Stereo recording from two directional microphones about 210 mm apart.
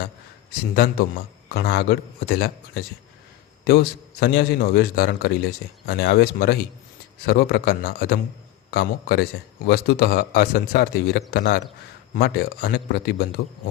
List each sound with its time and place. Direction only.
0.7 s a man's voice: 45° left (ahead or behind)
4.2 s a man's voice: 50° left (ahead or behind)